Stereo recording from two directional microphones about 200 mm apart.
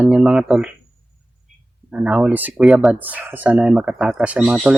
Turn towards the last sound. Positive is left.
turn(degrees=-5)  # may be behind; listen again after turning